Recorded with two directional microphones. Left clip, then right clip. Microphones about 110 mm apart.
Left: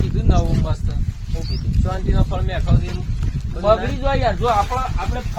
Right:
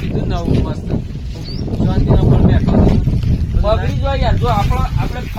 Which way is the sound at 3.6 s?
15° left (ahead or behind).